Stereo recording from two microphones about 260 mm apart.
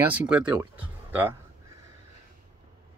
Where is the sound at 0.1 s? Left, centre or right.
Centre.